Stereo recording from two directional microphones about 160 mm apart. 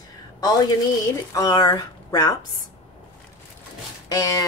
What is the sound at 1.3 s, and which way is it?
Speech, 20° left (ahead or behind).